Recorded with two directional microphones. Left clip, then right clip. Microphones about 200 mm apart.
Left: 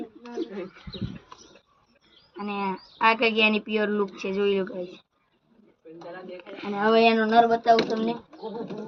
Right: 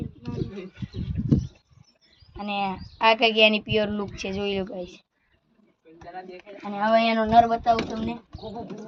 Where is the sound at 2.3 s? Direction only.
45° right (ahead or behind).